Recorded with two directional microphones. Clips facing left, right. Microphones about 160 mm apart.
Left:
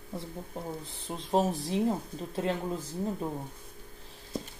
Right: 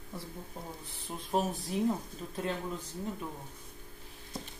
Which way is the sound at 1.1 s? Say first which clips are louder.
Left 4 dB; 25° left (ahead or behind).